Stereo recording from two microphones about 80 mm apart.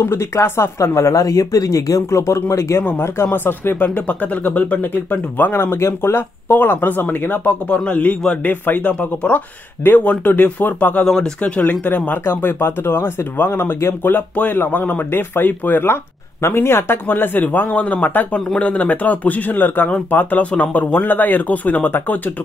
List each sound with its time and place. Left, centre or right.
0.0 s speech: left
2.8 s a man's voice: left
11.1 s speech: centre